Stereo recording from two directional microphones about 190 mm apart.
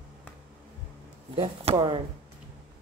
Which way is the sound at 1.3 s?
30° right (ahead or behind).